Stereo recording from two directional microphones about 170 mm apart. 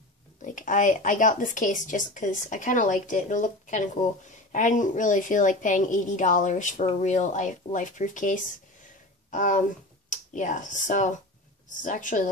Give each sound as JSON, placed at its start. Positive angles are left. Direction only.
{"t": 0.4, "sound": "speech", "side_deg": 50}